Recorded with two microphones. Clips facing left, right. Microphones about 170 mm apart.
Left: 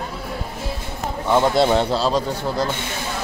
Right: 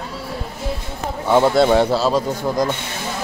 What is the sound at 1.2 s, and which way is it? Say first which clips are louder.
Speech: right 3 dB; 10° right (ahead or behind).